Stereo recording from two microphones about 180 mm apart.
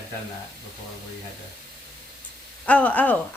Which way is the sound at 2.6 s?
10° left (ahead or behind).